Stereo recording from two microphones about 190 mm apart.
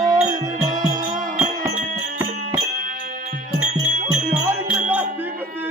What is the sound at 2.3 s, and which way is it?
Music, 40° right (ahead or behind).